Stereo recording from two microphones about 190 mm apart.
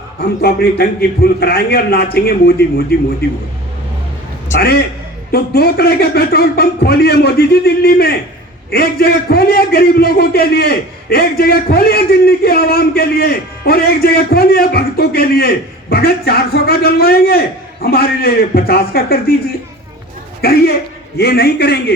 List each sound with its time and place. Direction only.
0.2 s a man's voice: 55° left (ahead or behind)
4.6 s a man's voice: 55° left (ahead or behind)
20.4 s a man's voice: 55° left (ahead or behind)